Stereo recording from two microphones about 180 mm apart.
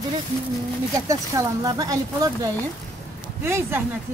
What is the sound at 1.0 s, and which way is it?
Speech, 20° right (ahead or behind).